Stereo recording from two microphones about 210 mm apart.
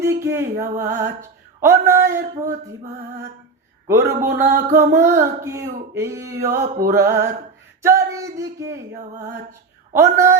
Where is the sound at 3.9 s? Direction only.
10° right (ahead or behind).